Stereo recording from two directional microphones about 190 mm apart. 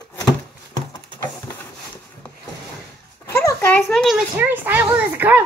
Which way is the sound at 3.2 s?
15° left (ahead or behind).